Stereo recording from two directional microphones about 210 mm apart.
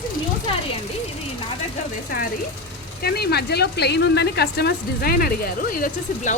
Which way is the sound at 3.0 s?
50° left (ahead or behind).